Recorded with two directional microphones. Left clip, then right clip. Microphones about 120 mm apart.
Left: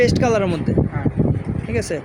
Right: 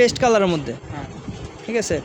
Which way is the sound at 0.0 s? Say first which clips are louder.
Right 1 dB; 15° right (ahead or behind).